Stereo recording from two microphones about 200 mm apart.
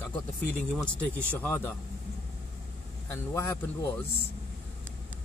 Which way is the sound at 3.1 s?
15° left (ahead or behind).